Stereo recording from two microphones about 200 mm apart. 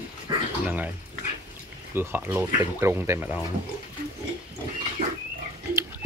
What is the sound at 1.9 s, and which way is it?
Speech, 10° right (ahead or behind).